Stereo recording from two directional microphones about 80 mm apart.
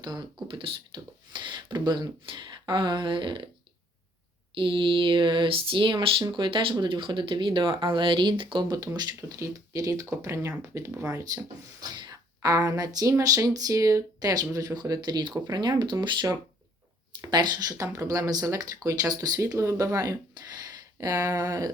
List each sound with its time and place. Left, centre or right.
0.0 s speech: right
0.4 s speech: right
4.5 s speech: right
9.0 s speech: right
17.3 s speech: right